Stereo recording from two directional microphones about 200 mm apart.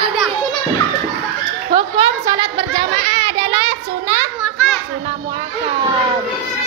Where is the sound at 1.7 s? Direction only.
25° right (ahead or behind).